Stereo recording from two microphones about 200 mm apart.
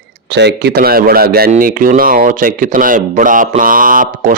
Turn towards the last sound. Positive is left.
turn(degrees=-40)  # may be behind; listen again after turning